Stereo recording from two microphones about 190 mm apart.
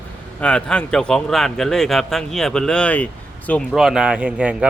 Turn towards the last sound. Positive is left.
turn(degrees=-5)  # may be behind; listen again after turning